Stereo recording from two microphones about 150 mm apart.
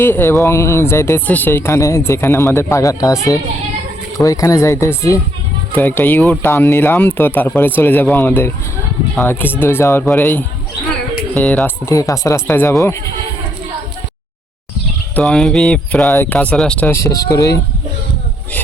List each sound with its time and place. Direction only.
0.0 s speech: 15° left (ahead or behind)
11.9 s speech: 20° left (ahead or behind)
15.1 s a sound: 5° left (ahead or behind)
16.1 s speech: 10° left (ahead or behind)